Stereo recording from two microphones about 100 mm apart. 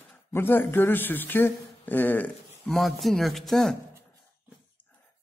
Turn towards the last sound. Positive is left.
turn(degrees=5)  # may be behind; listen again after turning